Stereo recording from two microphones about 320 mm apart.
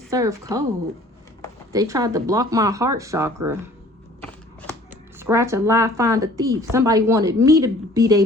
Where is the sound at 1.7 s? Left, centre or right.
Centre.